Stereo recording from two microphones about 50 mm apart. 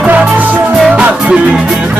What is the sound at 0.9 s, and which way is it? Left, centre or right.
Music, right.